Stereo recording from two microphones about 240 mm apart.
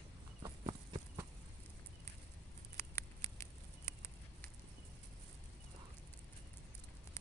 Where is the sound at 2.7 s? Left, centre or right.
Centre.